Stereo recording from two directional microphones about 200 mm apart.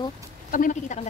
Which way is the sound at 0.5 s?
40° left (ahead or behind).